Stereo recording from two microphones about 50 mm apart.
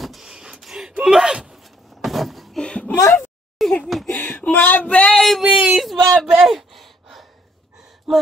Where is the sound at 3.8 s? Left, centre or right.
Centre.